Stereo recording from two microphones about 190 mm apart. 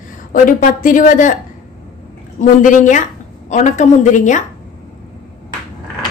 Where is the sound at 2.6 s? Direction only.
40° left (ahead or behind).